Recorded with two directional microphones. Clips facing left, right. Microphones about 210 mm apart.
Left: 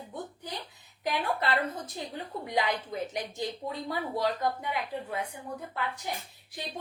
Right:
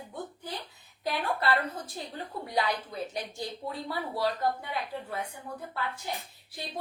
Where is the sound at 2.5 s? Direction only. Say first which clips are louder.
Left 1 dB; 20° left (ahead or behind).